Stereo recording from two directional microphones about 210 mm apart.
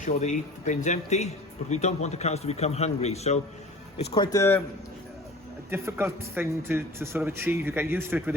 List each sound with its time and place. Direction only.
0.0 s a man's voice: 35° left (ahead or behind)
4.1 s speech: 20° left (ahead or behind)
5.7 s a man's voice: 10° right (ahead or behind)